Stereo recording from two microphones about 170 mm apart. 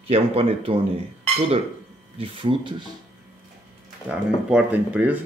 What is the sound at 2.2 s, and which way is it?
Speech, 30° right (ahead or behind).